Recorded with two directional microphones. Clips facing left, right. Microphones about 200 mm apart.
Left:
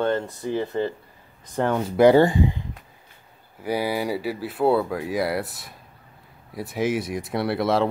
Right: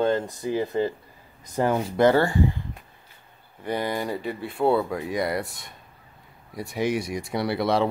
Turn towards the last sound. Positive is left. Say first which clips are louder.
# left 1 dB
turn(degrees=0)  # may be behind; listen again after turning